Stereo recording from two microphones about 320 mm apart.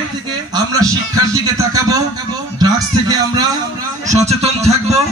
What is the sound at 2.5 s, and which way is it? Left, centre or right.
A man's voice, centre.